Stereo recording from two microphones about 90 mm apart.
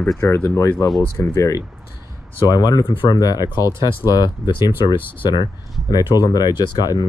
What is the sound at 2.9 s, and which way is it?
Speech, 65° left (ahead or behind).